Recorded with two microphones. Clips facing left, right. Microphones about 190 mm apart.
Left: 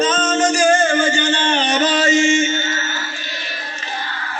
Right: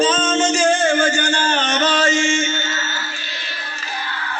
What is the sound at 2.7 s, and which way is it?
Music, 20° left (ahead or behind).